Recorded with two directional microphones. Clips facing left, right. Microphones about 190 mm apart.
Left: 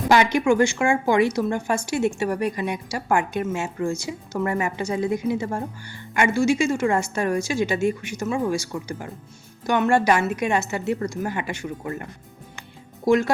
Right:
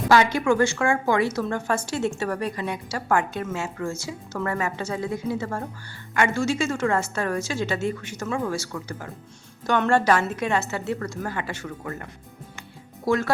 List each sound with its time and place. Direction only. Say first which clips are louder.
0.1 s speech: left 1 dB; 15° left (ahead or behind)
13.1 s speech: left 4 dB; 15° left (ahead or behind)